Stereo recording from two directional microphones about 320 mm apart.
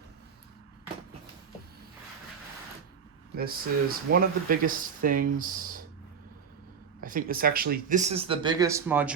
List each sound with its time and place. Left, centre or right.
3.3 s speech: right
7.0 s speech: right; by 9.1 s centre